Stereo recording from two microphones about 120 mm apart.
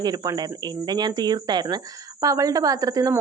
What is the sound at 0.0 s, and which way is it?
Speech, 35° right (ahead or behind).